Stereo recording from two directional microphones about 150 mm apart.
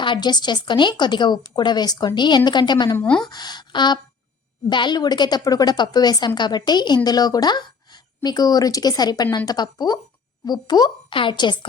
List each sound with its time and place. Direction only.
0.0 s a woman's voice: 30° left (ahead or behind)
3.0 s speech: 5° left (ahead or behind)
3.2 s a woman's voice: 30° left (ahead or behind)